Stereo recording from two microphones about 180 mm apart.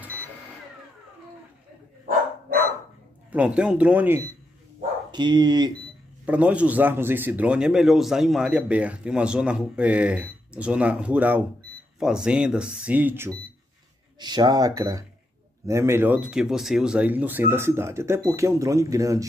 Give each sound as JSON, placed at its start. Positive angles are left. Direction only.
{"t": 3.3, "sound": "a man's voice", "side_deg": -5}
{"t": 5.1, "sound": "speech", "side_deg": -25}
{"t": 6.2, "sound": "a man's voice", "side_deg": -10}
{"t": 14.2, "sound": "a man's voice", "side_deg": -25}